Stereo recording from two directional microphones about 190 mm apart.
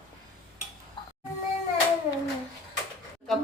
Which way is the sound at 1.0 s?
25° left (ahead or behind).